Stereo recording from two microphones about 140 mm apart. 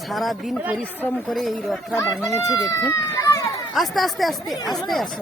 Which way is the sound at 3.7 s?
Centre (ahead or behind).